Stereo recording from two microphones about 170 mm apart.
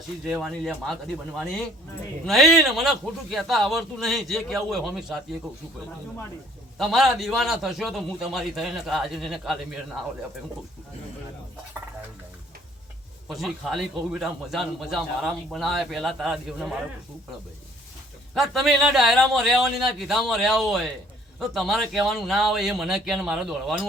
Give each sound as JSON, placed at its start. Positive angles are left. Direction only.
{"t": 0.3, "sound": "a man's voice", "side_deg": 0}
{"t": 6.7, "sound": "a man's voice", "side_deg": 0}
{"t": 13.2, "sound": "a man's voice", "side_deg": 0}
{"t": 18.3, "sound": "a man's voice", "side_deg": 0}